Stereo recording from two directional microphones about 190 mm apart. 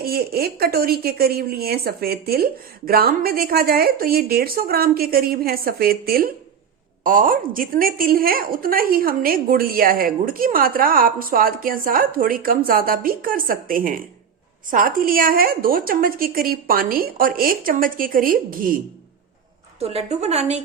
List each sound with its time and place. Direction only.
0.0 s a woman's voice: 55° right (ahead or behind)
19.8 s a woman's voice: 30° right (ahead or behind)